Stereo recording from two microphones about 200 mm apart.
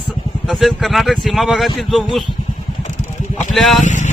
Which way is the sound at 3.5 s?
Centre (ahead or behind).